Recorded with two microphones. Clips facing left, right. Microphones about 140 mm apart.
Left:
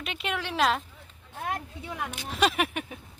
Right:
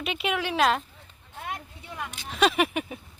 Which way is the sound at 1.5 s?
90° left.